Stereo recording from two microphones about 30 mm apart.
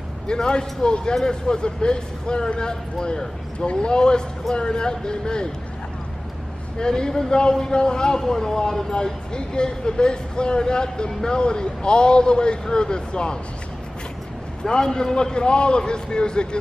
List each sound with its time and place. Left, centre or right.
0.3 s speech: left
3.5 s a man's voice: left
6.8 s a man's voice: left
14.6 s speech: left